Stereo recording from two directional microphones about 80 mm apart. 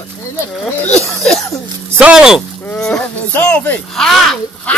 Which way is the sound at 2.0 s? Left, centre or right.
Centre.